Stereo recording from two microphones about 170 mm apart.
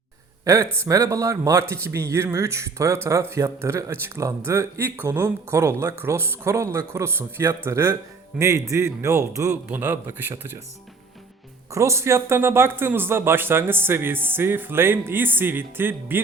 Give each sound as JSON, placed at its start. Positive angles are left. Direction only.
{"t": 0.4, "sound": "speech", "side_deg": -15}
{"t": 11.7, "sound": "speech", "side_deg": -15}